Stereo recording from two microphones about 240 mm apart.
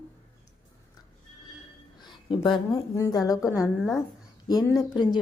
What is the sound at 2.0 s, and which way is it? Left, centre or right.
A woman's voice, centre.